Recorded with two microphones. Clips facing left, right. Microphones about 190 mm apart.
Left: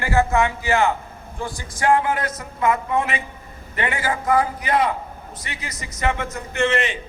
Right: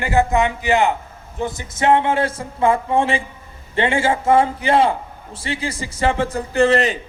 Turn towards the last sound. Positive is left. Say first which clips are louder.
# right 6 dB
turn(degrees=-35)  # may be behind; listen again after turning